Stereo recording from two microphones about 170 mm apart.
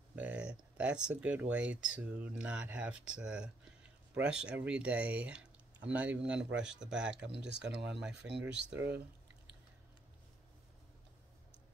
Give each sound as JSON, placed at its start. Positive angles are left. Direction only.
{"t": 0.1, "sound": "speech", "side_deg": -10}
{"t": 7.2, "sound": "speech", "side_deg": -85}
{"t": 8.0, "sound": "speech", "side_deg": -5}
{"t": 8.7, "sound": "speech", "side_deg": -80}